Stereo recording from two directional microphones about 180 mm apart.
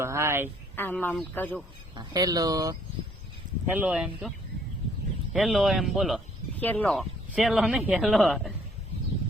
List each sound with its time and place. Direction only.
0.0 s speech: 15° right (ahead or behind)
0.8 s speech: 10° left (ahead or behind)
2.0 s speech: 20° right (ahead or behind)
5.3 s speech: centre (ahead or behind)
7.3 s speech: 5° right (ahead or behind)